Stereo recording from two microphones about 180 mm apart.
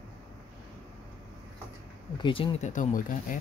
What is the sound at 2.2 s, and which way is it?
Speech, 30° left (ahead or behind).